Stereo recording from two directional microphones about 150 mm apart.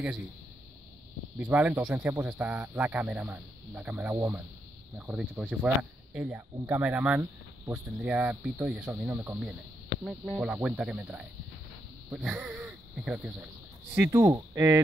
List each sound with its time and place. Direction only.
1.4 s speech: 10° right (ahead or behind)
13.9 s speech: 15° right (ahead or behind)